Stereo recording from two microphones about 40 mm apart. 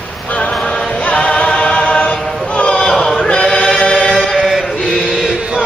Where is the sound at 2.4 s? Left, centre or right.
Left.